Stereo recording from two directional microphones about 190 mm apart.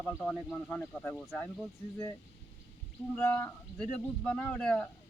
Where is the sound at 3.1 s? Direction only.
5° left (ahead or behind).